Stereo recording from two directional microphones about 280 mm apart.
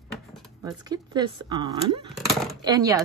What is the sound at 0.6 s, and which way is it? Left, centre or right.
Speech, centre.